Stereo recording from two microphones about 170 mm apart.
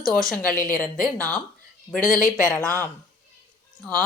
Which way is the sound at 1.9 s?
50° left (ahead or behind).